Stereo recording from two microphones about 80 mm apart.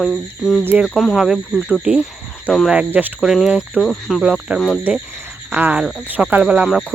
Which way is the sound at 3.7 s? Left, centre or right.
Centre.